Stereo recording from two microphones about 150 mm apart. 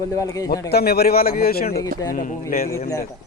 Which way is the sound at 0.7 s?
90° left.